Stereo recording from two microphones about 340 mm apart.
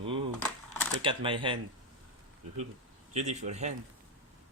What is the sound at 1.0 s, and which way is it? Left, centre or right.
Speech, centre.